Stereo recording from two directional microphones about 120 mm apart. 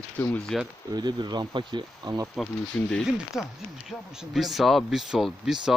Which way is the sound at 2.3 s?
5° left (ahead or behind).